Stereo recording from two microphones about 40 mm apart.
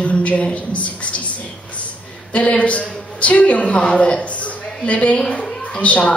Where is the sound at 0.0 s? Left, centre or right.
Left.